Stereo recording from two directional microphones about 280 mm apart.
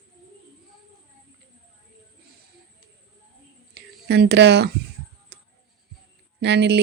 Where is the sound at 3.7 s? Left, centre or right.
Right.